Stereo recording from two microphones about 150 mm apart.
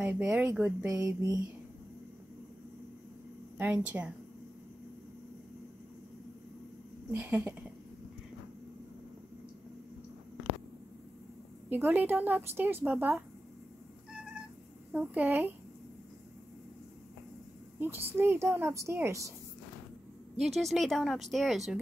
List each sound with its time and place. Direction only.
0.0 s speech: 10° right (ahead or behind)
3.5 s speech: 15° right (ahead or behind)
7.1 s speech: 15° right (ahead or behind)
11.7 s speech: 10° right (ahead or behind)
14.9 s speech: 10° right (ahead or behind)
17.7 s speech: 15° right (ahead or behind)
20.3 s speech: centre (ahead or behind)